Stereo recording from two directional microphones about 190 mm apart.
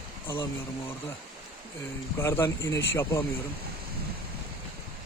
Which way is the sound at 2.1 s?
15° left (ahead or behind).